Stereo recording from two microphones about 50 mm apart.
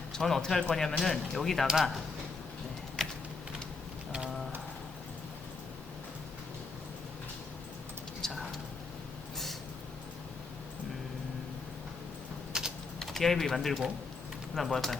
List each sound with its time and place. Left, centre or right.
0.1 s speech: centre
1.6 s speech: centre
4.1 s a sound: centre
8.2 s a sound: centre
12.5 s typing: centre
13.0 s speech: centre